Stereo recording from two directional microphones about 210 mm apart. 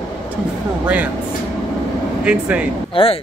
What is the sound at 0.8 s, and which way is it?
Speech, 5° right (ahead or behind).